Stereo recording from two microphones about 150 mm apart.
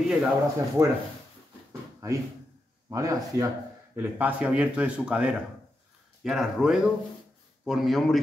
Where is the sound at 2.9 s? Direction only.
20° right (ahead or behind).